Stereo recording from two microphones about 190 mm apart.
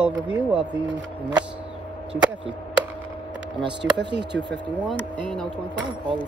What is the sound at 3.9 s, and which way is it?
Speech, 65° right (ahead or behind).